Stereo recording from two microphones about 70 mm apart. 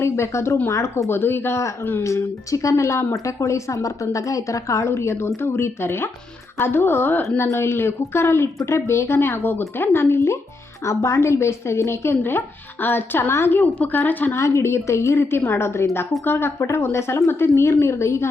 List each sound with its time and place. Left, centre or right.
0.0 s speech: left
2.0 s a woman's voice: left
13.6 s speech: left
14.3 s speech: left